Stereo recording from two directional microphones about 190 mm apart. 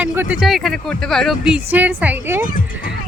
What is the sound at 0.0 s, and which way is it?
Speech, 10° right (ahead or behind).